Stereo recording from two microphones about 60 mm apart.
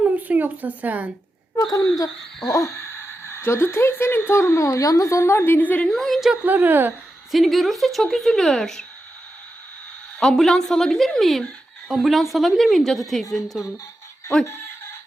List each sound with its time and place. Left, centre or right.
0.0 s a sound: right
1.7 s speech: left
2.5 s a woman's voice: left
5.0 s a woman's voice: left
5.5 s a woman's voice: left
5.8 s speech: centre
6.3 s a woman's voice: right
7.3 s speech: centre
10.2 s a woman's voice: centre